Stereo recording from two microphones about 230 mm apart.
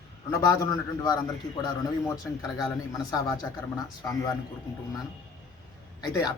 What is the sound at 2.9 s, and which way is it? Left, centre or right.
A man's voice, centre.